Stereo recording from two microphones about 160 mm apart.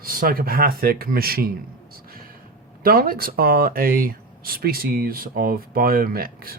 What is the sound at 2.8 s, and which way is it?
Speech, 65° right (ahead or behind).